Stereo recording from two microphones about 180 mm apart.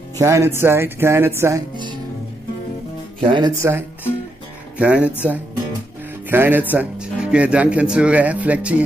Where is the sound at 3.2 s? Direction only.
25° right (ahead or behind); by 5.1 s 5° right (ahead or behind).